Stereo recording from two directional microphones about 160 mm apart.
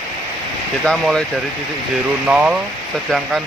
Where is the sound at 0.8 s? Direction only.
5° left (ahead or behind).